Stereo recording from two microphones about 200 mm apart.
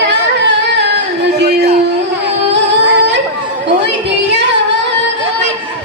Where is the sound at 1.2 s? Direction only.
55° right (ahead or behind).